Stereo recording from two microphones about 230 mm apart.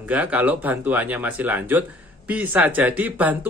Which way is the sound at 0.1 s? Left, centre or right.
Centre.